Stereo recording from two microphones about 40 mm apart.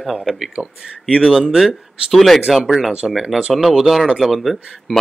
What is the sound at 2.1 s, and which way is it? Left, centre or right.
Speech, centre.